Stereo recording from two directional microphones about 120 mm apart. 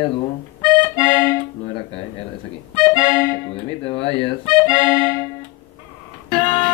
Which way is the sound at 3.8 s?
50° left (ahead or behind).